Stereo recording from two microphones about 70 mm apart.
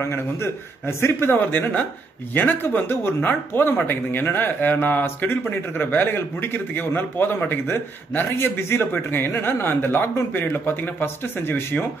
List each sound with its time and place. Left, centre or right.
0.0 s a man's voice: left